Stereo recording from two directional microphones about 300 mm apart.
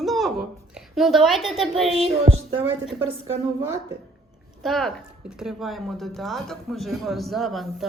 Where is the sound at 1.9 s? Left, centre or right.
Right.